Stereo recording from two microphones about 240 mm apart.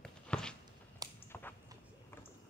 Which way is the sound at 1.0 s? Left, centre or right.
Centre.